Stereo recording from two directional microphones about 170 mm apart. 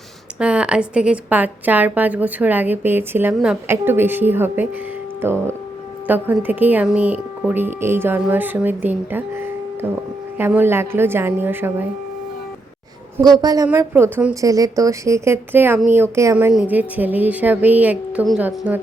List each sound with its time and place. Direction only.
0.3 s a woman's voice: 5° right (ahead or behind)
13.1 s a woman's voice: 20° right (ahead or behind)
14.4 s a woman's voice: 20° right (ahead or behind)